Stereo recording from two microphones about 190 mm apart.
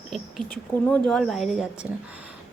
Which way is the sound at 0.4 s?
25° right (ahead or behind).